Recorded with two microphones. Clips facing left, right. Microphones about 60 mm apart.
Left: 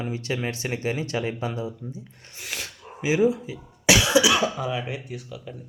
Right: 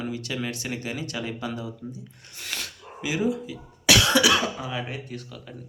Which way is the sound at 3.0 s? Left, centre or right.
Left.